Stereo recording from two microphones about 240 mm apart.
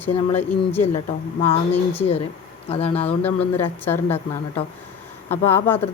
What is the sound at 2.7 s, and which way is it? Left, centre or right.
Speech, left.